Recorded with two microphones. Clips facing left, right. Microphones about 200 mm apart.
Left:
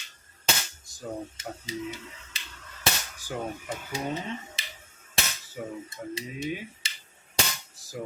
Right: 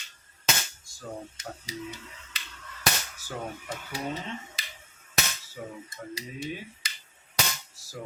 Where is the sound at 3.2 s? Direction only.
15° left (ahead or behind).